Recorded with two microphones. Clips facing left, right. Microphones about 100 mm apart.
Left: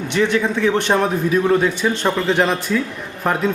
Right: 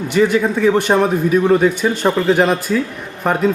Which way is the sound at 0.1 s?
5° right (ahead or behind).